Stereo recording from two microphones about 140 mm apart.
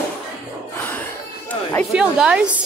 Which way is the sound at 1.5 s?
10° left (ahead or behind).